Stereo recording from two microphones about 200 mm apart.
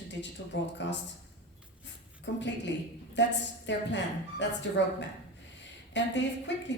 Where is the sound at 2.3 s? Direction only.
60° left (ahead or behind).